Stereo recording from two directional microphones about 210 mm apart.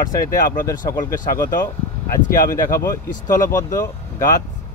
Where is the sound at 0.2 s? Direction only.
45° left (ahead or behind).